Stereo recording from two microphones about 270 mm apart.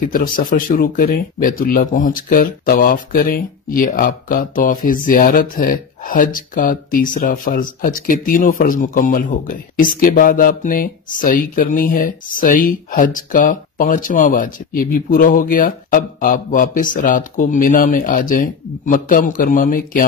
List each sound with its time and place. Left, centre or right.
0.1 s speech: left